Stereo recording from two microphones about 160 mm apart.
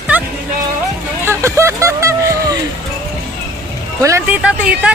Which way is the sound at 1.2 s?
15° right (ahead or behind).